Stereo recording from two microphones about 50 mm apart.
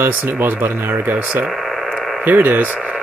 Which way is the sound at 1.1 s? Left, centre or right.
Right.